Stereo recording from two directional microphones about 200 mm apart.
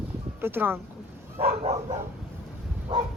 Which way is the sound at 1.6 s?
30° right (ahead or behind).